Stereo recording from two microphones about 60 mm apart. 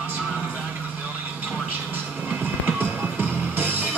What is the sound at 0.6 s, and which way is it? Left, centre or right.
Vehicle, right.